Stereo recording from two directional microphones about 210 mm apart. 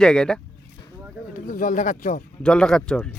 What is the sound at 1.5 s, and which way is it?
Speech, 40° left (ahead or behind).